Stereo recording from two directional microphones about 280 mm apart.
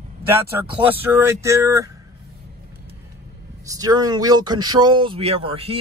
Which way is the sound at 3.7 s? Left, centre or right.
Centre.